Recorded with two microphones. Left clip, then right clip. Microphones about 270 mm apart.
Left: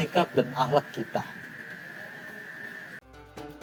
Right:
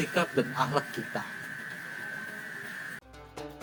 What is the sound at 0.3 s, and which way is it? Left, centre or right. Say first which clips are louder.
Speech: left 4 dB; centre.